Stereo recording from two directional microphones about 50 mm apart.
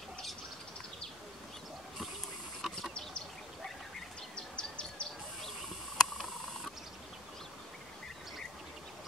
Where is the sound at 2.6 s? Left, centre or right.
Centre.